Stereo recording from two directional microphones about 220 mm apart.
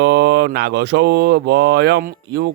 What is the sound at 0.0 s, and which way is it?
Speech, 50° right (ahead or behind).